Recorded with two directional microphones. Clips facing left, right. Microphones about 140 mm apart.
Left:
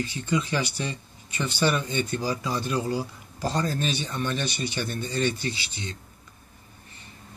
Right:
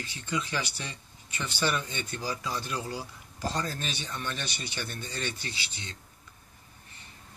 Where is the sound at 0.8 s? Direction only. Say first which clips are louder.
Left 9 dB; 25° left (ahead or behind).